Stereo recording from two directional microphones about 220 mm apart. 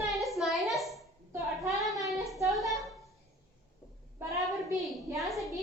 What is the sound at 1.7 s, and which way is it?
Child singing, centre (ahead or behind).